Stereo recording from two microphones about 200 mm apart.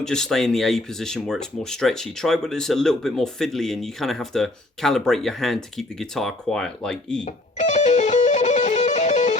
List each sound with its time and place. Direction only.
0.0 s speech: 5° left (ahead or behind)
7.6 s music: 35° left (ahead or behind)